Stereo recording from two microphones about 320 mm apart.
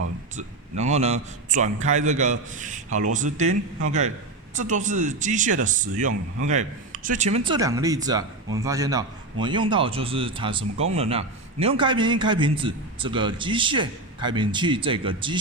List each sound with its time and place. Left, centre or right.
0.3 s speech: right
4.5 s a man's voice: right